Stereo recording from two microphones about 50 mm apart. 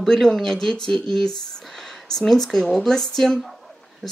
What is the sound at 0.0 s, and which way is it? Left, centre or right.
Speech, centre.